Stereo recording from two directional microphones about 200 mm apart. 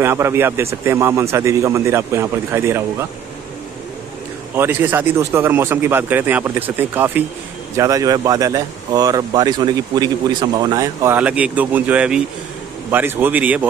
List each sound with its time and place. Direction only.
0.0 s speech: 15° right (ahead or behind)
4.6 s speech: 10° right (ahead or behind)